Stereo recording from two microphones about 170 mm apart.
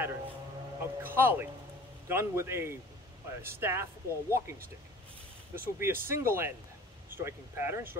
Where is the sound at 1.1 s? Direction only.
15° right (ahead or behind).